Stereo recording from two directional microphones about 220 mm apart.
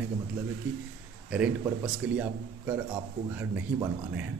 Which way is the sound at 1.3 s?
5° right (ahead or behind).